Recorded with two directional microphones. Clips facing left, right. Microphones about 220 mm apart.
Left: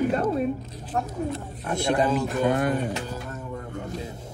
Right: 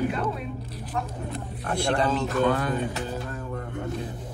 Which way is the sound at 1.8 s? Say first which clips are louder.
Left 2 dB; 20° left (ahead or behind).